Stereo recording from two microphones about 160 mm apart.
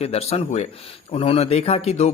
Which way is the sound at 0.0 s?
40° left (ahead or behind).